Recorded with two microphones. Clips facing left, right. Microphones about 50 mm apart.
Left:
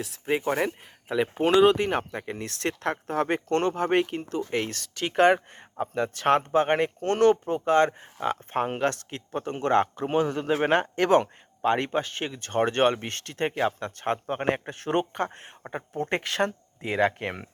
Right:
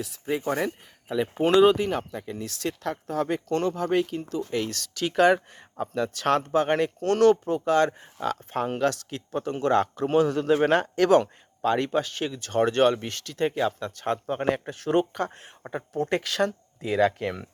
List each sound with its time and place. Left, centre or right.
0.6 s speech: left
1.4 s speech: centre
1.8 s speech: left
2.1 s speech: left